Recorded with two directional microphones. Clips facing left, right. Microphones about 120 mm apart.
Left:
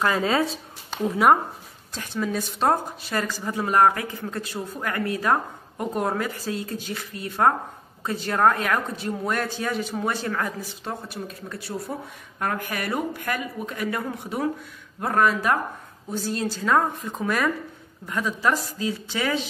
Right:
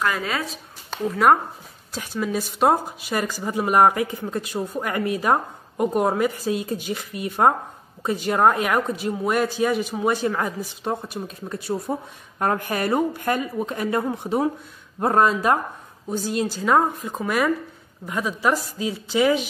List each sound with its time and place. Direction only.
0.0 s speech: 30° left (ahead or behind)
1.0 s speech: 5° left (ahead or behind)
1.9 s speech: 10° right (ahead or behind)